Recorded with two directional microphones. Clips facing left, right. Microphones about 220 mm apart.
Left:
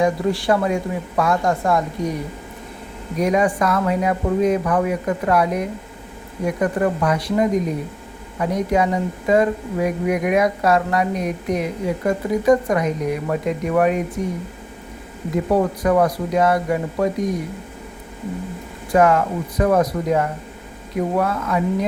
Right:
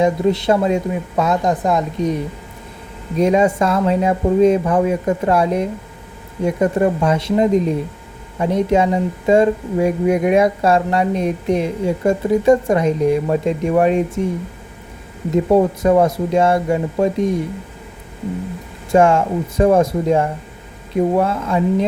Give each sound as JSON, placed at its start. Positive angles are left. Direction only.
{"t": 0.0, "sound": "a woman's voice", "side_deg": -20}
{"t": 3.2, "sound": "a woman's voice", "side_deg": -25}
{"t": 15.5, "sound": "a woman's voice", "side_deg": -25}
{"t": 18.9, "sound": "a woman's voice", "side_deg": -25}